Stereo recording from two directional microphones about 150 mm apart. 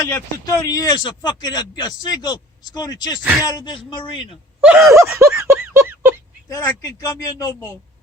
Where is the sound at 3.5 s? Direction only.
25° left (ahead or behind).